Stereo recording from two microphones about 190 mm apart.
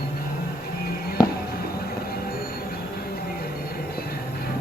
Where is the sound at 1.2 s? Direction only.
20° left (ahead or behind).